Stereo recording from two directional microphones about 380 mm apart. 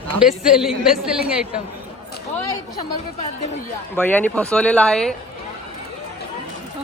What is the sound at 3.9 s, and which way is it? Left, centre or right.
A woman's voice, centre.